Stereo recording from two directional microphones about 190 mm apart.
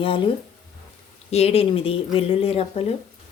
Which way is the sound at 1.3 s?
30° left (ahead or behind).